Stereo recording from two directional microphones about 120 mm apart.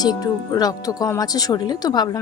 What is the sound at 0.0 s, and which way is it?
Speech, 35° left (ahead or behind).